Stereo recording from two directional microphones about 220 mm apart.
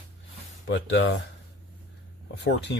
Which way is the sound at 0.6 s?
60° left (ahead or behind).